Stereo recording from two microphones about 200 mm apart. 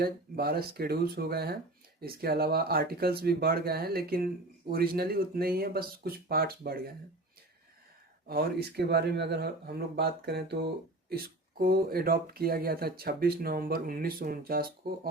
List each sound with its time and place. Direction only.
0.0 s speech: 50° right (ahead or behind)
8.3 s speech: 50° right (ahead or behind)